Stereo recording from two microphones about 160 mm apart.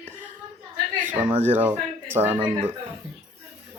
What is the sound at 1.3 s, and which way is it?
Speech, 40° right (ahead or behind).